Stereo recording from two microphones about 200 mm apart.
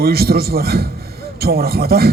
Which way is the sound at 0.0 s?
50° right (ahead or behind).